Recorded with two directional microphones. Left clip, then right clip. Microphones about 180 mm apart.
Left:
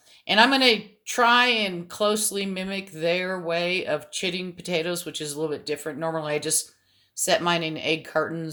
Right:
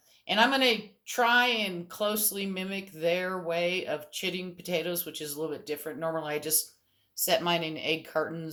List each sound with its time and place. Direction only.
0.3 s speech: 45° left (ahead or behind); by 8.4 s 25° left (ahead or behind)